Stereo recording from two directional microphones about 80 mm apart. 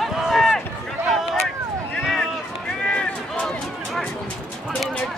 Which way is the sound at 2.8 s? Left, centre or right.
Centre.